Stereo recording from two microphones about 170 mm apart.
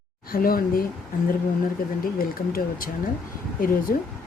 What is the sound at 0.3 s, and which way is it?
Speech, 60° left (ahead or behind).